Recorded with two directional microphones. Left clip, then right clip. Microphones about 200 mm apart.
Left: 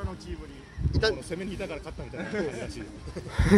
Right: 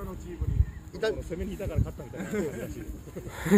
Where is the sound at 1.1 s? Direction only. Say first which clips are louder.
Left 1 dB; 45° left (ahead or behind).